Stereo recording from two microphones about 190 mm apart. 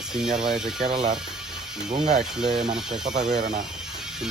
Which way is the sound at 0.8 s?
25° right (ahead or behind).